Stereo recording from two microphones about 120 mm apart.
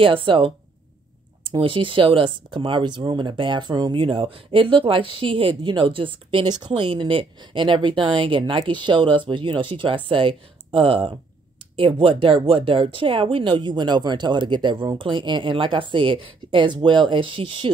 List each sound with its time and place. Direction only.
0.0 s speech: 45° right (ahead or behind)
1.6 s speech: 45° right (ahead or behind)